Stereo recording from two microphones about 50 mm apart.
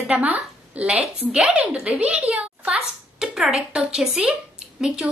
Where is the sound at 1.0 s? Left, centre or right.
Centre.